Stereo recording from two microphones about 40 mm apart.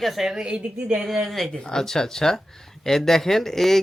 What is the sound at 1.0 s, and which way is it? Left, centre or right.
Speech, centre.